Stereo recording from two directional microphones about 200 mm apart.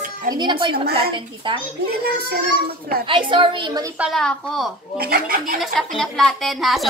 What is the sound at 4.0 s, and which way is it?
Speech, centre (ahead or behind).